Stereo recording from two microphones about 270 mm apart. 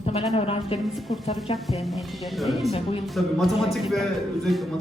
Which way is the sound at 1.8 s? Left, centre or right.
Centre.